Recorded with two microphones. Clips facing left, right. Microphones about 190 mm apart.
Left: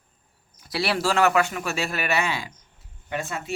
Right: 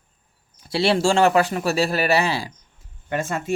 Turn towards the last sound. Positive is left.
turn(degrees=-50)  # may be behind; listen again after turning